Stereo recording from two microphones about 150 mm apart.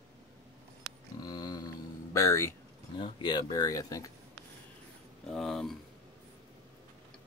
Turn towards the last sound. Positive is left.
turn(degrees=0)  # may be behind; listen again after turning